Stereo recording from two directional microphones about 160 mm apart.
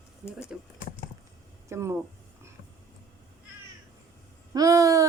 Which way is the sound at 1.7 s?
15° right (ahead or behind).